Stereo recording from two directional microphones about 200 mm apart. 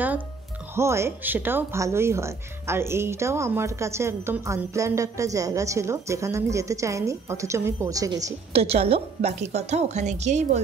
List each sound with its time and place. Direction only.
0.7 s speech: 15° right (ahead or behind)
8.5 s a woman's voice: 30° right (ahead or behind)